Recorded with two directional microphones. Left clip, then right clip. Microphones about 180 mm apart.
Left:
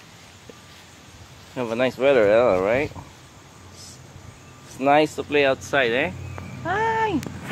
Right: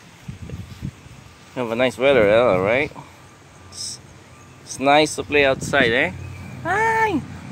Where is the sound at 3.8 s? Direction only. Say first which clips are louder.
Right 13 dB; 20° left (ahead or behind).